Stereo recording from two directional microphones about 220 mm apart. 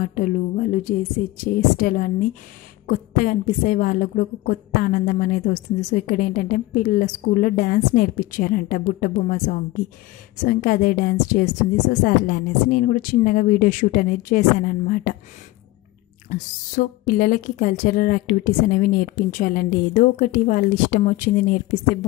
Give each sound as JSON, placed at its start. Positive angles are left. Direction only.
{"t": 0.0, "sound": "a woman's voice", "side_deg": 40}
{"t": 16.7, "sound": "a woman's voice", "side_deg": 40}